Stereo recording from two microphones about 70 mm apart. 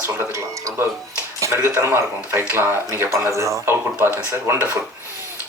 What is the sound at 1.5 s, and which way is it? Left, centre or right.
Speech, right.